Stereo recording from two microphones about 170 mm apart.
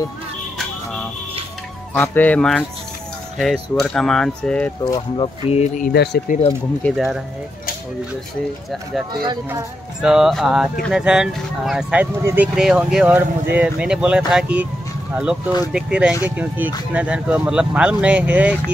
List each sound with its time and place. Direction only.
2.0 s speech: 10° left (ahead or behind)
4.9 s speech: 30° left (ahead or behind)
5.6 s speech: 50° left (ahead or behind)
5.9 s speech: 65° left (ahead or behind)
6.8 s speech: centre (ahead or behind)
10.0 s speech: centre (ahead or behind)
15.7 s speech: 5° right (ahead or behind)